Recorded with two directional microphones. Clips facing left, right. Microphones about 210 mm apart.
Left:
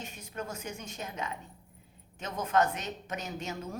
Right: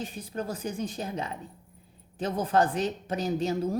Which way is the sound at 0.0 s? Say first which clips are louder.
Right 6 dB; 35° right (ahead or behind).